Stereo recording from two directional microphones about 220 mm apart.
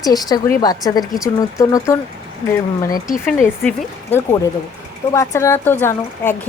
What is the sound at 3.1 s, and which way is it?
Speech, centre (ahead or behind).